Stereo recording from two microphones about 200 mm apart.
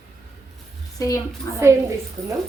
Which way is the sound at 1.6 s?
15° right (ahead or behind).